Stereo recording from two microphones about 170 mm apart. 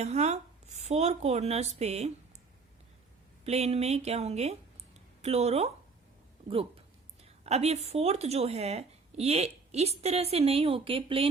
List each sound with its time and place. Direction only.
0.0 s a woman's voice: 40° right (ahead or behind)
3.4 s a woman's voice: 40° right (ahead or behind)